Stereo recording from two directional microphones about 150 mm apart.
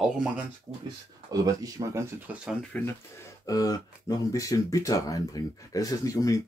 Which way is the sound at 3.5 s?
25° left (ahead or behind).